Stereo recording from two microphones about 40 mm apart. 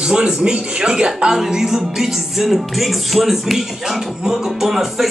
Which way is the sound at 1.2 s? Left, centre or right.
Centre.